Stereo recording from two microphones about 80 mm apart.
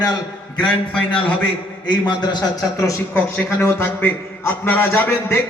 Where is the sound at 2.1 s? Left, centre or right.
Left.